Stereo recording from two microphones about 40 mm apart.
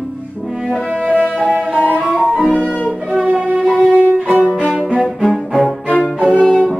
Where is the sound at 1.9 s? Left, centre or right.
Right.